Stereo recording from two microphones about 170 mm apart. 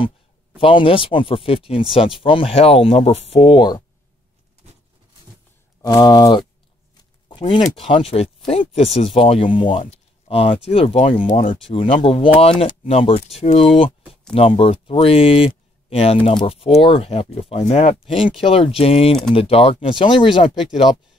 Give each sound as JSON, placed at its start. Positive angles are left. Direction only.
{"t": 0.6, "sound": "speech", "side_deg": 30}
{"t": 5.8, "sound": "speech", "side_deg": 20}
{"t": 11.2, "sound": "speech", "side_deg": 50}
{"t": 11.7, "sound": "speech", "side_deg": 30}